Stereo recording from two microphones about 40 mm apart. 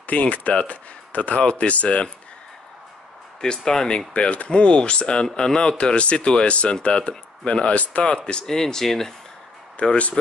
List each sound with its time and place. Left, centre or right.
0.0 s speech: left
3.3 s speech: centre
4.1 s speech: left
8.0 s speech: left
8.5 s speech: centre
9.8 s speech: left